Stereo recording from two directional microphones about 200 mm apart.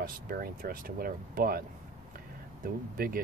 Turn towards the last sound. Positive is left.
turn(degrees=-45)  # may be behind; listen again after turning